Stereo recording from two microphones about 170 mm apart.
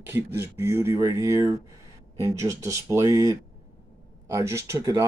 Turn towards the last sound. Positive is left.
turn(degrees=-20)  # may be behind; listen again after turning